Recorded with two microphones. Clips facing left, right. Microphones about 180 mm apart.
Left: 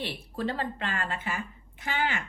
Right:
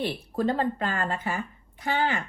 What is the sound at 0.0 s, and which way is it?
Speech, 45° right (ahead or behind).